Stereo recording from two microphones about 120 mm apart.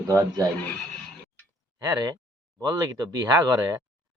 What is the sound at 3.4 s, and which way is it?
Speech, 30° right (ahead or behind).